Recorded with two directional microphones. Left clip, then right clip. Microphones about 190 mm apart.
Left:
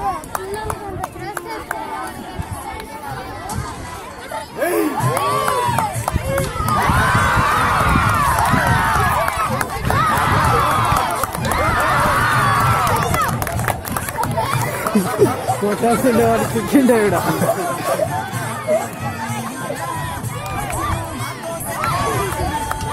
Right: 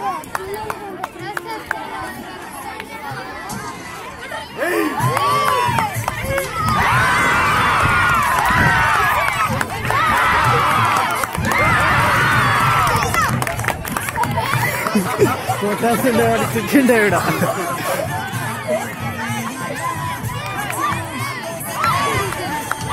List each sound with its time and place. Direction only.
4.6 s music: 55° left (ahead or behind)
5.0 s crowd: 50° left (ahead or behind)
6.8 s run: 50° left (ahead or behind)
9.8 s a sound: 50° left (ahead or behind)
12.3 s a sound: 40° left (ahead or behind)
12.7 s music: 50° left (ahead or behind)
15.6 s speech: 15° left (ahead or behind)
17.2 s a sound: 45° left (ahead or behind)
18.7 s music: 45° left (ahead or behind)
20.5 s music: 45° left (ahead or behind)
21.8 s run: 50° left (ahead or behind)